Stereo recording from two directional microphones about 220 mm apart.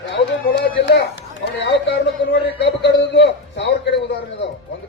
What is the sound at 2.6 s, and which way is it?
A man's voice, 50° left (ahead or behind).